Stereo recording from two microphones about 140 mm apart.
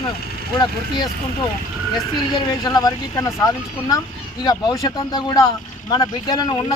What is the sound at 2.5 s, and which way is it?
Speech, 25° left (ahead or behind).